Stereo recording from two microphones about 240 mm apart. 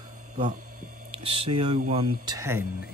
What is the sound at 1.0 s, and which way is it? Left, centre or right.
Typing, right.